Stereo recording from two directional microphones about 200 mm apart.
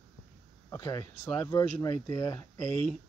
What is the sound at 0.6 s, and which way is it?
Speech, 15° left (ahead or behind).